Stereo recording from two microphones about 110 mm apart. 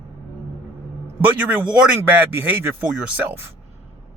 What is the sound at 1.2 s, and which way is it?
Speech, 15° right (ahead or behind).